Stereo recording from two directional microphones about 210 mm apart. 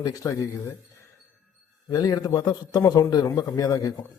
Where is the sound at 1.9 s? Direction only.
20° left (ahead or behind).